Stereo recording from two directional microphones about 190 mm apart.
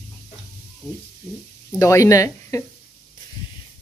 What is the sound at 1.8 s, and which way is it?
Speech, 15° left (ahead or behind).